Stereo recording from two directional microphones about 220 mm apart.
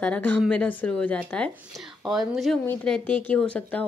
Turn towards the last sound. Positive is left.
turn(degrees=5)  # may be behind; listen again after turning